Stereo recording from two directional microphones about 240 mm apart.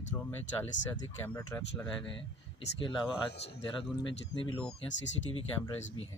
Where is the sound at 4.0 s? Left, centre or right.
Left.